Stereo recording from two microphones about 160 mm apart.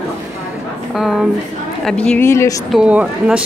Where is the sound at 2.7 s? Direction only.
5° right (ahead or behind).